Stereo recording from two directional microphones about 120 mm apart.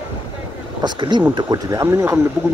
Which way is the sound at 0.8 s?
40° right (ahead or behind).